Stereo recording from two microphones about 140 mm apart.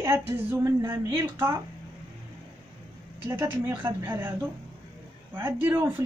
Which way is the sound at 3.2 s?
20° right (ahead or behind).